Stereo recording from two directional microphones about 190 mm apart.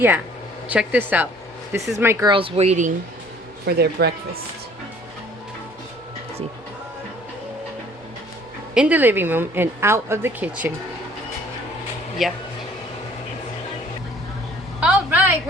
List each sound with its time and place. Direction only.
0.7 s a woman's voice: 10° right (ahead or behind)
2.3 s speech: 30° right (ahead or behind)
3.7 s speech: 60° right (ahead or behind)
8.7 s a woman's voice: 5° right (ahead or behind)
12.2 s speech: centre (ahead or behind)
14.8 s a sound: 5° right (ahead or behind)